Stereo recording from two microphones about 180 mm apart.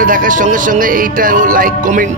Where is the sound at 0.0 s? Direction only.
50° right (ahead or behind).